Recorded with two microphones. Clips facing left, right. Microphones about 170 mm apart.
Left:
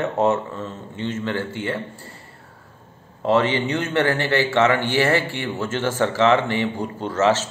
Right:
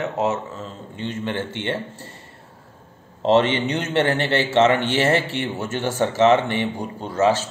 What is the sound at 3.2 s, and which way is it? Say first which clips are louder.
A man's voice: right 2 dB; 20° right (ahead or behind).